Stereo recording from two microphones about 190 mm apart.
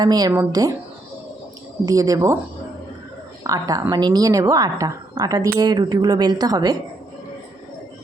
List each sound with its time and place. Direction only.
0.0 s a woman's voice: 20° right (ahead or behind)
1.8 s speech: 20° right (ahead or behind)
3.4 s a woman's voice: 20° right (ahead or behind)